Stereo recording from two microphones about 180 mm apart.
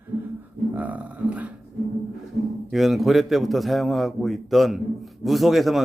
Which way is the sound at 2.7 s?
Centre (ahead or behind).